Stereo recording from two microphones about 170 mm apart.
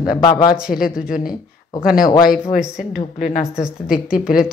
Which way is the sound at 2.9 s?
50° left (ahead or behind).